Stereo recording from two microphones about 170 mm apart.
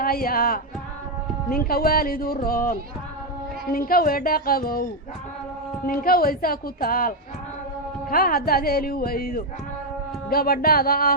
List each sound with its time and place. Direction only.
0.0 s a woman's voice: 60° left (ahead or behind)
8.1 s a woman's voice: 60° left (ahead or behind)